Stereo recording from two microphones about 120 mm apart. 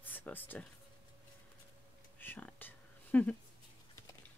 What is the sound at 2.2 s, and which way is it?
Whispering, 15° left (ahead or behind).